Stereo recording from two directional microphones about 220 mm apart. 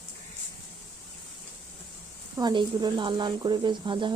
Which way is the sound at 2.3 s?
20° right (ahead or behind).